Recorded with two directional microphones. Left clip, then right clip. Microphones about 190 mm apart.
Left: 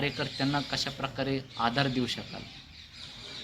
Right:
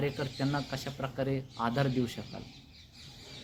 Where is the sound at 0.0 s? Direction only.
50° right (ahead or behind).